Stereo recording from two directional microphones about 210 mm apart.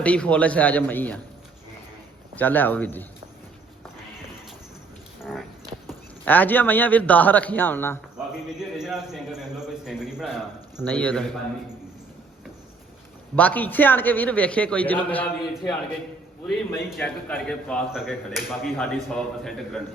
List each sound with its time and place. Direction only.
0.0 s a man's voice: 5° left (ahead or behind)
2.3 s a man's voice: 10° left (ahead or behind)
5.2 s a sound: centre (ahead or behind)
5.9 s a man's voice: 10° left (ahead or behind)
8.7 s a man's voice: centre (ahead or behind)
13.3 s a man's voice: 5° left (ahead or behind)